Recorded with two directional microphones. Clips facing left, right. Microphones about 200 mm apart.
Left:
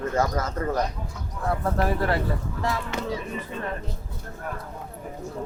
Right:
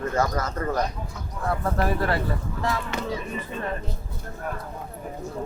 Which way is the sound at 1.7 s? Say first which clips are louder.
Even; 20° left (ahead or behind).